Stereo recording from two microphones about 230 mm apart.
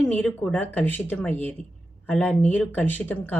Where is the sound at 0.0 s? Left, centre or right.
Centre.